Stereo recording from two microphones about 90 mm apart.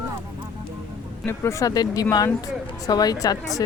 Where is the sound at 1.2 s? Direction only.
25° left (ahead or behind); by 3.3 s 45° left (ahead or behind).